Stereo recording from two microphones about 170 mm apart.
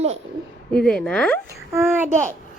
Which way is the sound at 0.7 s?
5° left (ahead or behind).